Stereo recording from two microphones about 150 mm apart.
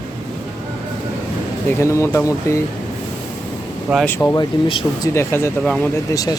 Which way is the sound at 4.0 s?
10° left (ahead or behind).